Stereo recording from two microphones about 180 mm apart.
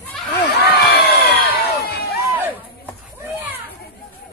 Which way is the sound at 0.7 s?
60° left (ahead or behind).